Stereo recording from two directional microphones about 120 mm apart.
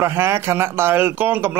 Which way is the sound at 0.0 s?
20° right (ahead or behind).